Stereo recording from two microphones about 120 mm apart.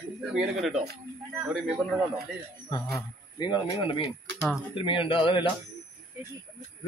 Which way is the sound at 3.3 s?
40° left (ahead or behind).